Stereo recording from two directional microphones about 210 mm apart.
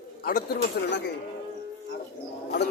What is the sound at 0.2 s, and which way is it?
Speech, 45° left (ahead or behind).